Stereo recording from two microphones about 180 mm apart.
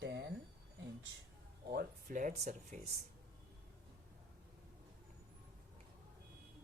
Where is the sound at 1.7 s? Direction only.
50° right (ahead or behind).